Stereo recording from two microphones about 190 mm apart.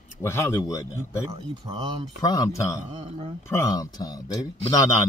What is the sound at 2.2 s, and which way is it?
Speech, 20° left (ahead or behind).